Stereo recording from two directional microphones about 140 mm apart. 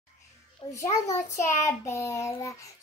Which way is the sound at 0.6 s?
40° left (ahead or behind).